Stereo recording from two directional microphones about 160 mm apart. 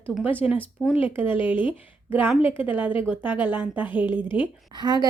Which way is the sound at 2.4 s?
35° left (ahead or behind).